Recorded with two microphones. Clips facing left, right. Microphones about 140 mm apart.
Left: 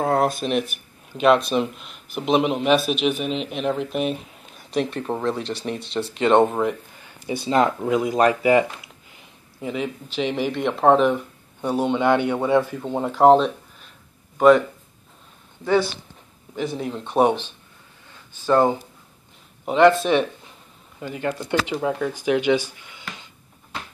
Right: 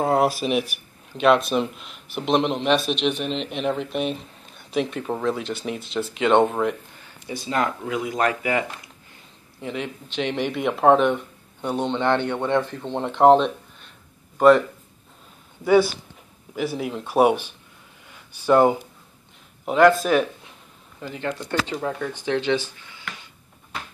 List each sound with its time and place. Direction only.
0.0 s speech: 5° right (ahead or behind)
7.2 s speech: 25° left (ahead or behind)
9.1 s speech: 5° left (ahead or behind)
15.6 s speech: 10° right (ahead or behind)
19.6 s speech: centre (ahead or behind)
21.0 s speech: 10° left (ahead or behind)